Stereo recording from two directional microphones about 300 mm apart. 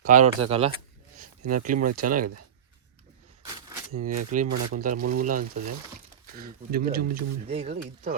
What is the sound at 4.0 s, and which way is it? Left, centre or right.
Speech, right.